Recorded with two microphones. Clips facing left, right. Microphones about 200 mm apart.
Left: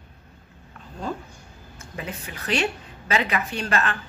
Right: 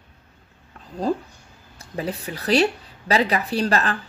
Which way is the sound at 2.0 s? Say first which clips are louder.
Right 7 dB; 35° right (ahead or behind).